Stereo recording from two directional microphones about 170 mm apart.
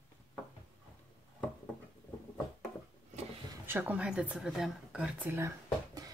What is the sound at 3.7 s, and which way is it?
Speech, 10° right (ahead or behind).